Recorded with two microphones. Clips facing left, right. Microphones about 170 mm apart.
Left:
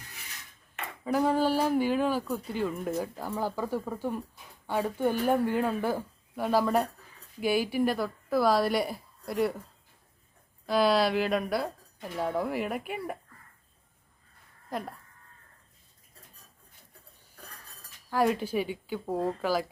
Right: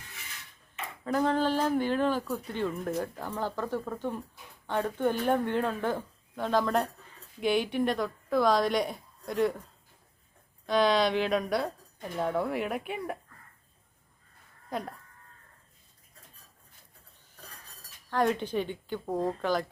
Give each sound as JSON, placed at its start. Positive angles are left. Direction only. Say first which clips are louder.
{"t": 1.0, "sound": "speech", "louder": "left 1 dB", "side_deg": 10}
{"t": 10.7, "sound": "speech", "louder": "even", "side_deg": 5}
{"t": 14.7, "sound": "speech", "louder": "even", "side_deg": 0}
{"t": 18.1, "sound": "speech", "louder": "left 1 dB", "side_deg": 5}